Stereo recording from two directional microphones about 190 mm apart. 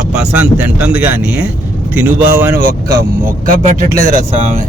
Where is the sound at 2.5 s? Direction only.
50° right (ahead or behind).